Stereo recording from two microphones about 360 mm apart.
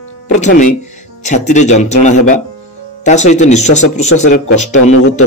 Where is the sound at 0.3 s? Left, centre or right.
Left.